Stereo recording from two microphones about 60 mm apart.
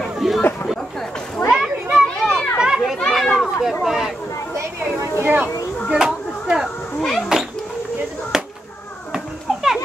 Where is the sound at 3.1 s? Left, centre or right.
Centre.